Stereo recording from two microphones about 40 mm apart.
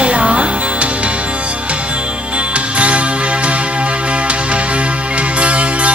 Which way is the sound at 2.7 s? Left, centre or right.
Right.